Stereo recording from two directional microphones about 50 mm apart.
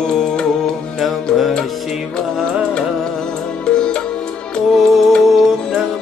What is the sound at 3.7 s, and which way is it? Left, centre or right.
Music, centre.